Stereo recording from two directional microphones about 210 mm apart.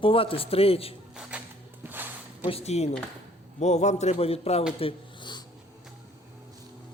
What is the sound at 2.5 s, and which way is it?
A man's voice, 30° left (ahead or behind).